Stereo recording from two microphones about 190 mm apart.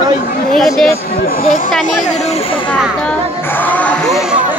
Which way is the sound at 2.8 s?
5° left (ahead or behind).